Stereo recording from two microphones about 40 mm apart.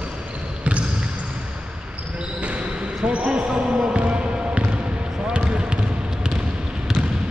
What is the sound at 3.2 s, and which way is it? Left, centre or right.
Basketball bounce, right.